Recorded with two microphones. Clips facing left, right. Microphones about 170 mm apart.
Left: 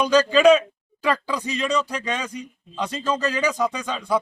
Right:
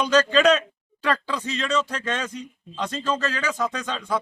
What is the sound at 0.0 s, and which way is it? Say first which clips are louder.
Speech: left 3 dB; 10° left (ahead or behind).